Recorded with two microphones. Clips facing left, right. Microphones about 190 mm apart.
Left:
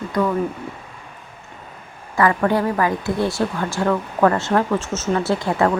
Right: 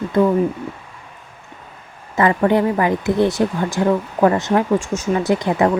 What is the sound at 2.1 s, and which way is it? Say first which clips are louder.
Speech: right 2 dB; 20° right (ahead or behind).